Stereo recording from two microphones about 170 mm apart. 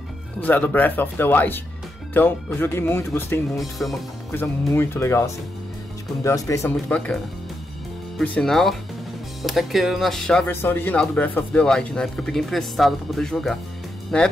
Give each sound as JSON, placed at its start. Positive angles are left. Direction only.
{"t": 0.4, "sound": "speech", "side_deg": 10}
{"t": 3.7, "sound": "speech", "side_deg": 0}
{"t": 4.3, "sound": "speech", "side_deg": 15}
{"t": 8.2, "sound": "speech", "side_deg": 5}